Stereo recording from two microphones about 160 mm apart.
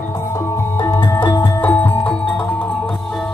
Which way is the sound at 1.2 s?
10° left (ahead or behind).